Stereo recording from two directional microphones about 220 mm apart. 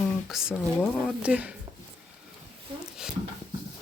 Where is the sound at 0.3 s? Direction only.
Centre (ahead or behind).